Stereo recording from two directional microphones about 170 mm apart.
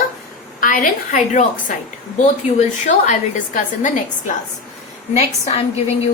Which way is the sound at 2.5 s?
45° left (ahead or behind).